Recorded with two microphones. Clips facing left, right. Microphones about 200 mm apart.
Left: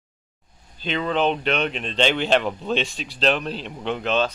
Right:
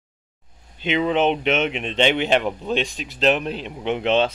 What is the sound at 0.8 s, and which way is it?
Speech, 20° right (ahead or behind).